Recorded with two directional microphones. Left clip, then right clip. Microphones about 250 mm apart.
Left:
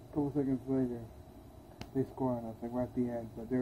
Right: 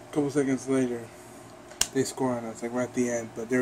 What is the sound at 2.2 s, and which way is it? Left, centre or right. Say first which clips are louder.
Speech: right 7 dB; centre.